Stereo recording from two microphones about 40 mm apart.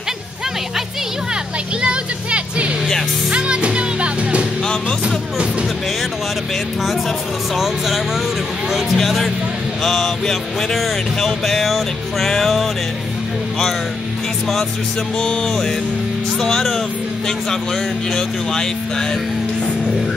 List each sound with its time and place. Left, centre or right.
1.8 s music: right
7.5 s speech: centre
15.4 s speech: centre
18.1 s speech: centre